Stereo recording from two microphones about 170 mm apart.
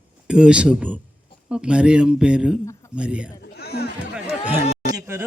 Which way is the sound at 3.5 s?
70° left (ahead or behind).